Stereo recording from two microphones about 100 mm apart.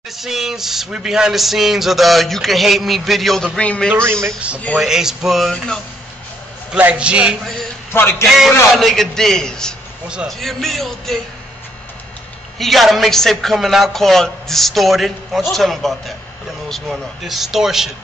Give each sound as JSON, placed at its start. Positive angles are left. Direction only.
{"t": 0.2, "sound": "speech", "side_deg": -5}
{"t": 3.9, "sound": "a woman's voice", "side_deg": -25}
{"t": 4.7, "sound": "speech", "side_deg": -5}
{"t": 6.7, "sound": "a man's voice", "side_deg": -10}
{"t": 7.9, "sound": "a man's voice", "side_deg": 20}
{"t": 8.7, "sound": "speech", "side_deg": 0}
{"t": 10.0, "sound": "a man's voice", "side_deg": -10}
{"t": 10.4, "sound": "speech", "side_deg": 0}
{"t": 12.5, "sound": "speech", "side_deg": 0}